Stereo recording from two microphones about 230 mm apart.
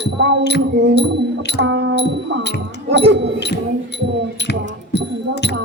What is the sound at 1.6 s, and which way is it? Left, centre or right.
Music, right.